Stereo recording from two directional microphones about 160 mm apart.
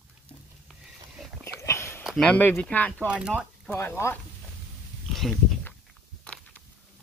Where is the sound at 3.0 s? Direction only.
5° right (ahead or behind).